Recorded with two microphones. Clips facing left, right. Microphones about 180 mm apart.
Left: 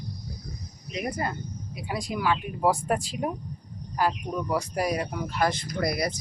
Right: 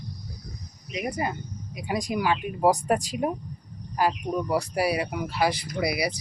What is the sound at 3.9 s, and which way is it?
Speech, 15° right (ahead or behind).